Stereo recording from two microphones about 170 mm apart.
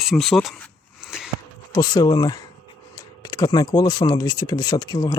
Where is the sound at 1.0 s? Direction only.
5° right (ahead or behind).